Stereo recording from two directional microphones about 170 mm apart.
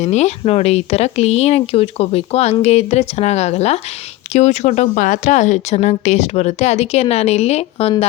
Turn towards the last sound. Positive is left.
turn(degrees=40)  # may be behind; listen again after turning